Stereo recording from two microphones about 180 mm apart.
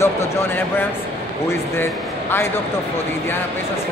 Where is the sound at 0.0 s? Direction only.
15° left (ahead or behind).